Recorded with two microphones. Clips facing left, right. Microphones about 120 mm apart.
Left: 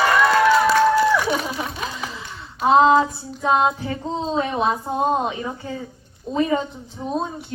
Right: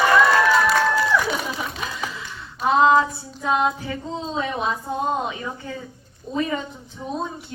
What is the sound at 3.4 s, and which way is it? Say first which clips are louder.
A woman's voice: left 3 dB; 30° left (ahead or behind).